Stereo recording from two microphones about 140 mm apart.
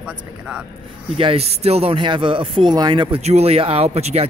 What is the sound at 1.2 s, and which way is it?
A man's voice, 45° right (ahead or behind).